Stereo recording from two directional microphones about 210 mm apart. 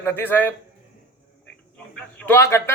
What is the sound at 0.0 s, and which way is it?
Speech, 10° left (ahead or behind).